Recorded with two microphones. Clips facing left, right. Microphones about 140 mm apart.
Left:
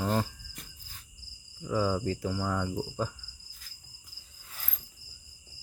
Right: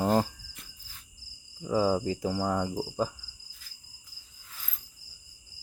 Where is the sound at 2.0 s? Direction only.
15° right (ahead or behind).